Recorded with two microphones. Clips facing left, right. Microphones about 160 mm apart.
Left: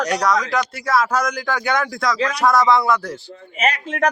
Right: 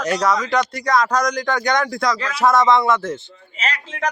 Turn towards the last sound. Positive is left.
turn(degrees=55)  # may be behind; listen again after turning